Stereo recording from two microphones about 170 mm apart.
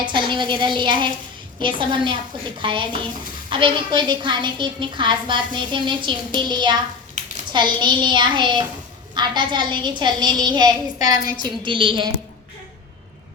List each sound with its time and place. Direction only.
0.0 s a woman's voice: 30° right (ahead or behind)
7.2 s a sound: 45° right (ahead or behind)
7.5 s a woman's voice: 25° right (ahead or behind)